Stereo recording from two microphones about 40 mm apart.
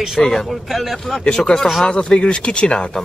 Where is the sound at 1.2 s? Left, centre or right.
Left.